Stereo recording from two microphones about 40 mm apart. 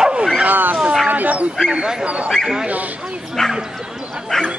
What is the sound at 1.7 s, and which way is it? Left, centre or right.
Speech, centre.